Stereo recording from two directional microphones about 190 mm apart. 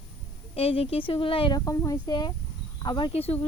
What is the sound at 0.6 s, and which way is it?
Speech, 30° left (ahead or behind).